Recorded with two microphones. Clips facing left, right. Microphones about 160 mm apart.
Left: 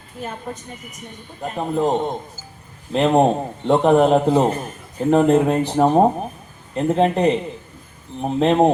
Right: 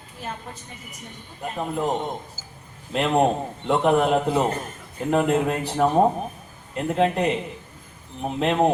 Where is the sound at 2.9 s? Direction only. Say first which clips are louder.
Left 5 dB; 30° left (ahead or behind).